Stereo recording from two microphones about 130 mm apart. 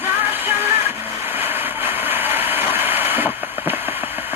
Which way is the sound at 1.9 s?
15° right (ahead or behind).